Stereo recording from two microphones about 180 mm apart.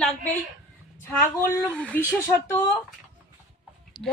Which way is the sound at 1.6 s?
5° left (ahead or behind).